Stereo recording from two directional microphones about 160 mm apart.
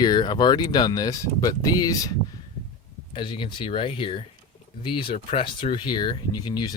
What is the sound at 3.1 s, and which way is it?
Speech, 30° left (ahead or behind).